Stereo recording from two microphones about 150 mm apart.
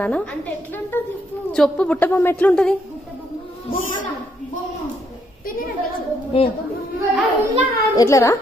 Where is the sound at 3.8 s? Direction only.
60° left (ahead or behind).